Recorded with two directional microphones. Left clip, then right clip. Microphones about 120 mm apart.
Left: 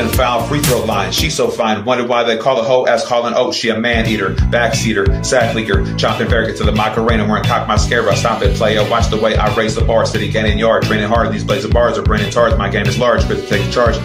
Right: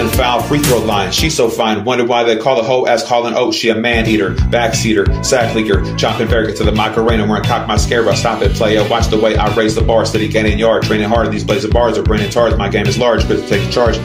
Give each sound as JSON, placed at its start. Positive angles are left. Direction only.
{"t": 1.6, "sound": "a man's voice", "side_deg": -30}
{"t": 9.1, "sound": "a man's voice", "side_deg": -25}
{"t": 11.8, "sound": "a man's voice", "side_deg": -25}